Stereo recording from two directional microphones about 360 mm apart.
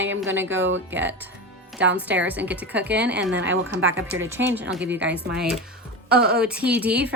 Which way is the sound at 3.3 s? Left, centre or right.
Right.